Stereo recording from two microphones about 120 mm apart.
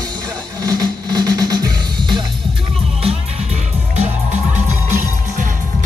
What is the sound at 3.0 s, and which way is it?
Music, 70° right (ahead or behind).